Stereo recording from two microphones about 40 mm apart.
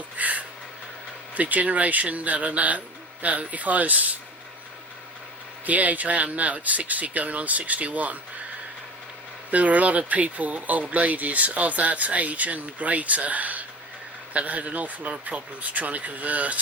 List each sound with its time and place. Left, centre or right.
0.2 s a sound: right
1.4 s speech: right
5.6 s speech: right
9.5 s speech: right